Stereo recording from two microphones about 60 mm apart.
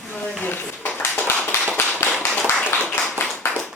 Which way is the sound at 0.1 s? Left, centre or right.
Left.